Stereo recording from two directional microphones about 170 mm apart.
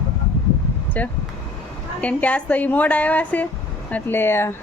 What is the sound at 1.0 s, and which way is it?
Speech, 10° left (ahead or behind).